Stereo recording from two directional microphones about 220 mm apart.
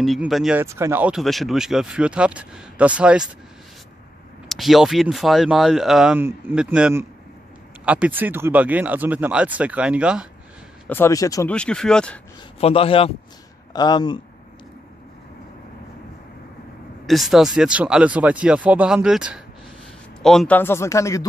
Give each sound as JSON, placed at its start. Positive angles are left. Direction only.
{"t": 0.0, "sound": "speech", "side_deg": 0}
{"t": 4.5, "sound": "speech", "side_deg": 0}
{"t": 10.9, "sound": "speech", "side_deg": 10}
{"t": 11.5, "sound": "speech", "side_deg": 5}
{"t": 12.5, "sound": "speech", "side_deg": 25}
{"t": 17.0, "sound": "speech", "side_deg": 0}